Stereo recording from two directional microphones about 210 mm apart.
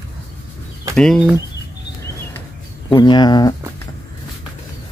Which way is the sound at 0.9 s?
5° left (ahead or behind).